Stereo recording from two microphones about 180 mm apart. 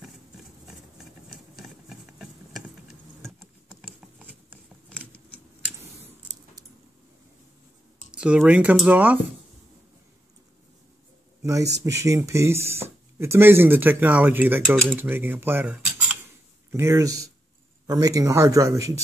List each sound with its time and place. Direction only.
1.6 s a sound: centre (ahead or behind)
3.2 s insect: 5° left (ahead or behind)
8.1 s speech: 5° right (ahead or behind)
11.4 s speech: 20° right (ahead or behind)
14.9 s cutlery: 10° right (ahead or behind)
16.7 s speech: 15° right (ahead or behind)